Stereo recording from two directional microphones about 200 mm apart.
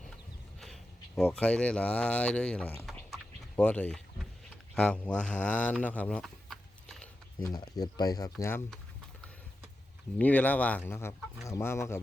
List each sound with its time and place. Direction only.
0.6 s speech: centre (ahead or behind)
7.4 s speech: 20° left (ahead or behind)
10.2 s speech: 10° left (ahead or behind)